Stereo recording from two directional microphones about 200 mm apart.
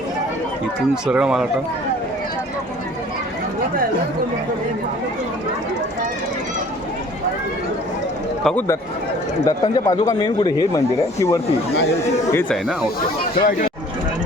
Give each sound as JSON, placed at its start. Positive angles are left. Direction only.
{"t": 1.0, "sound": "speech", "side_deg": -5}
{"t": 8.4, "sound": "speech", "side_deg": 10}
{"t": 13.4, "sound": "speech", "side_deg": 50}